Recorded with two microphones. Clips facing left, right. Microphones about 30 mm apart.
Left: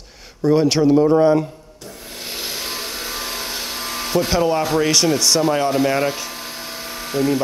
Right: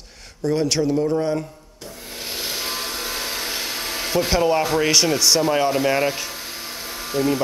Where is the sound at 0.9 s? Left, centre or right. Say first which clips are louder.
Left 7 dB; left.